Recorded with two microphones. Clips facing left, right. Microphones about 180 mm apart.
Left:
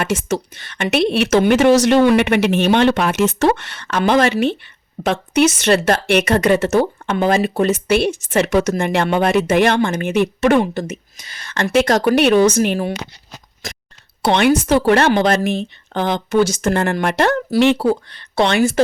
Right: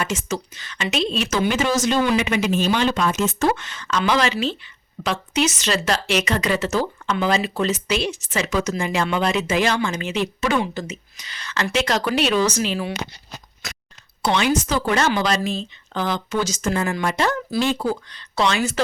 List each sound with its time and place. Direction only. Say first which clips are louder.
0.0 s a woman's voice: left 6 dB; 60° left (ahead or behind)
14.3 s a woman's voice: left 6 dB; 60° left (ahead or behind)
18.4 s a woman's voice: left 6 dB; 55° left (ahead or behind)